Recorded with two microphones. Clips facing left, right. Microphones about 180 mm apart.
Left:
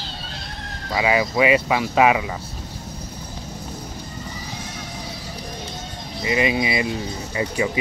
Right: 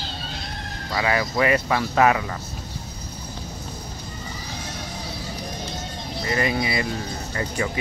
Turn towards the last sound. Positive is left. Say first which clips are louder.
# left 3 dB
turn(degrees=15)  # may be behind; listen again after turning